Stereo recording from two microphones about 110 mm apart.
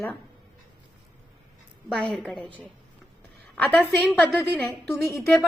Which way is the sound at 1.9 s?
10° left (ahead or behind).